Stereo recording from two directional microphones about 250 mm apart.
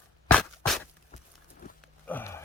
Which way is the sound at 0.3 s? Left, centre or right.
Centre.